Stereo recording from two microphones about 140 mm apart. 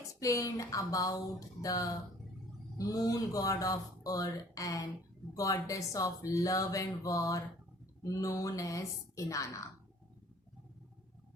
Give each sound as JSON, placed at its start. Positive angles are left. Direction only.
{"t": 0.1, "sound": "speech", "side_deg": 25}